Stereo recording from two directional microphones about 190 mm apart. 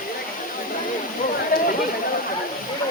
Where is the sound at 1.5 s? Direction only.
45° left (ahead or behind).